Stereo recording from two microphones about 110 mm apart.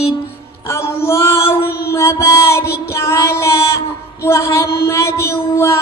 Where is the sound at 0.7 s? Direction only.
25° left (ahead or behind).